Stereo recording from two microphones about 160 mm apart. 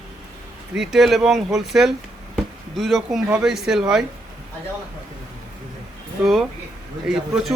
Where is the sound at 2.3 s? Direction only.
Centre (ahead or behind).